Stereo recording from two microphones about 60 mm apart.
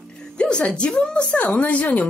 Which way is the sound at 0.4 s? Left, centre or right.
Centre.